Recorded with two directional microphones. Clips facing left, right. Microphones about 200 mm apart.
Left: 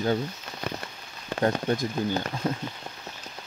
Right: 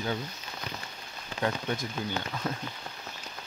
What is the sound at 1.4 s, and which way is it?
Speech, 40° left (ahead or behind).